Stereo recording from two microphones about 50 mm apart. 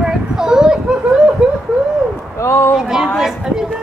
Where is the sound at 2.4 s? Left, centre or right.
Left.